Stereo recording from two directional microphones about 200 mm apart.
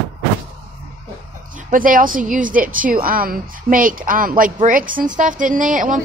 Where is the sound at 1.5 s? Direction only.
40° right (ahead or behind).